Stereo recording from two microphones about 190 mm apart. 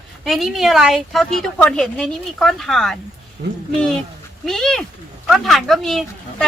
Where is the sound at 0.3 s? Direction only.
Centre (ahead or behind).